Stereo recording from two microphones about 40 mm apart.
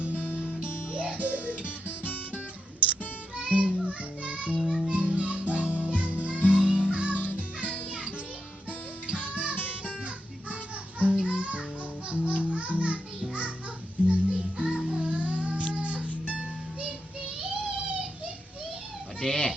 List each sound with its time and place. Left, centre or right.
0.9 s music: right
3.3 s music: right
9.3 s music: right
11.1 s music: right
14.1 s music: right
15.1 s cat: right
15.7 s music: right
17.2 s music: right
19.2 s children playing: centre